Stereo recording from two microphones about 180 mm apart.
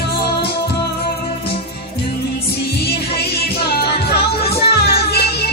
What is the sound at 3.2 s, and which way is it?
Music, 65° left (ahead or behind).